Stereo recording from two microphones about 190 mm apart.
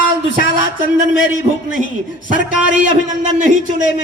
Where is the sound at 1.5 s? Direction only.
30° right (ahead or behind).